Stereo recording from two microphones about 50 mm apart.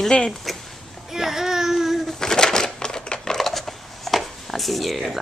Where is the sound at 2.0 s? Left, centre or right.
Centre.